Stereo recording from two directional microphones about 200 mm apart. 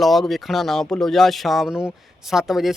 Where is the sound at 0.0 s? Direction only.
Centre (ahead or behind).